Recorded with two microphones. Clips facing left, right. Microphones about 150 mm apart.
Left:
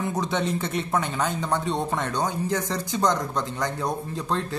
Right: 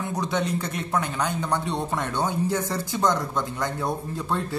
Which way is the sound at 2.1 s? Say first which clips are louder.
Right 3 dB; 15° left (ahead or behind).